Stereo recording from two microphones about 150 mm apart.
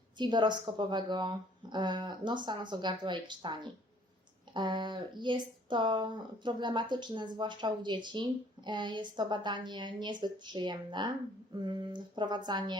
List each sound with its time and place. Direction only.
0.2 s speech: 30° right (ahead or behind)